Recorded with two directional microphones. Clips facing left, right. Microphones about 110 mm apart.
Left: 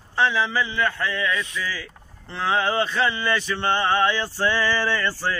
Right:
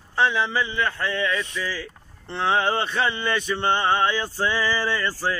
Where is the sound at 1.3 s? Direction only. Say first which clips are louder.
Even; 35° right (ahead or behind).